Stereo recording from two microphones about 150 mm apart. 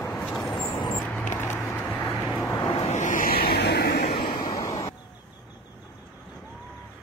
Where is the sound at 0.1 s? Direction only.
5° left (ahead or behind).